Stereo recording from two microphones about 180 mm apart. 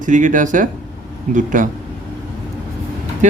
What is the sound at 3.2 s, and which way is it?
Speech, 40° right (ahead or behind).